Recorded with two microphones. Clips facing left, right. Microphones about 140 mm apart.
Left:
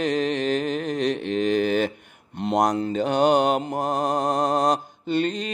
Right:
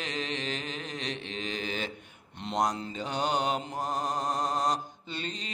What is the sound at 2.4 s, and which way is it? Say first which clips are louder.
Mantra: left 8 dB; 50° left (ahead or behind).